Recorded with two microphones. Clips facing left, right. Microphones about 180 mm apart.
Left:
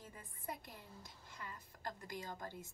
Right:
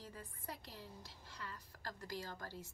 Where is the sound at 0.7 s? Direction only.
50° left (ahead or behind).